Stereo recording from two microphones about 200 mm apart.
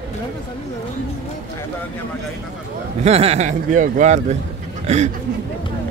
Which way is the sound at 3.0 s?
30° right (ahead or behind).